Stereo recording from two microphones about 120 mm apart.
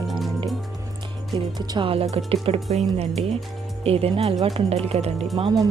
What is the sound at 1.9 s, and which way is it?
Speech, 60° right (ahead or behind).